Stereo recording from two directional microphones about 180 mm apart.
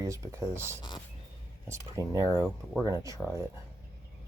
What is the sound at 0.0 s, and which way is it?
Speech, 15° right (ahead or behind).